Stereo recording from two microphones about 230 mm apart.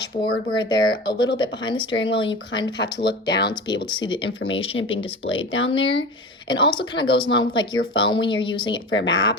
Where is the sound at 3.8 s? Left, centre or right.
Centre.